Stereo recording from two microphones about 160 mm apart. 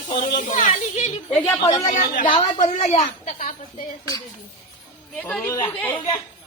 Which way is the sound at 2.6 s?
45° left (ahead or behind).